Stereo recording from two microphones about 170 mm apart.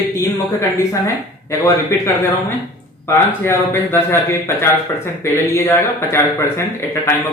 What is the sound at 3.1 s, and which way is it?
Speech, 15° left (ahead or behind).